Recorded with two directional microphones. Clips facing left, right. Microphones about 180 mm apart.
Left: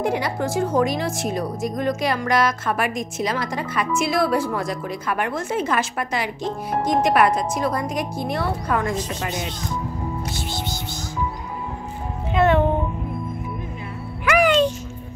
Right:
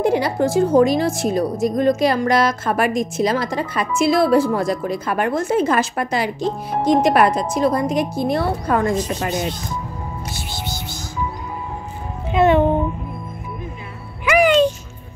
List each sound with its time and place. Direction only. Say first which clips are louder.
0.0 s a woman's voice: right 5 dB; 30° right (ahead or behind)
14.2 s music: right 3 dB; 5° right (ahead or behind)